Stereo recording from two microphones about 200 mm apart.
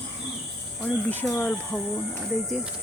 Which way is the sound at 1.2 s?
10° left (ahead or behind).